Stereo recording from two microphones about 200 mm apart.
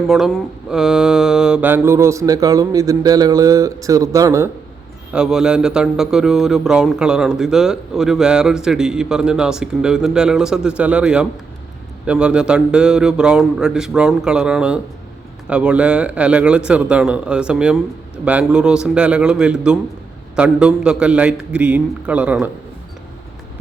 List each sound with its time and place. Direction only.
0.1 s mantra: centre (ahead or behind); by 4.4 s 15° right (ahead or behind)
5.1 s speech: 5° right (ahead or behind)